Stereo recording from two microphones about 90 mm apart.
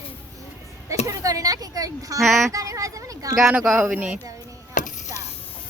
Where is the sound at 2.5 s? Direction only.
40° right (ahead or behind).